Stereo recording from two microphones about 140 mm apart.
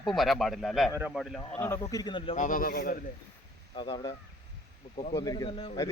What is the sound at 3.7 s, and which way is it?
Speech, 35° left (ahead or behind).